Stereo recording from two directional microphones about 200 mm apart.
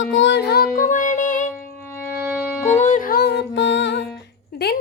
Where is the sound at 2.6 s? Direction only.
40° left (ahead or behind); by 4.1 s 65° left (ahead or behind).